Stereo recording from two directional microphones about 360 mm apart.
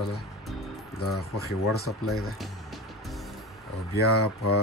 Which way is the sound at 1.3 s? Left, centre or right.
Left.